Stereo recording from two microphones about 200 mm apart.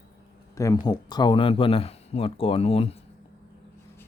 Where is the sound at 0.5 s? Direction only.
20° left (ahead or behind).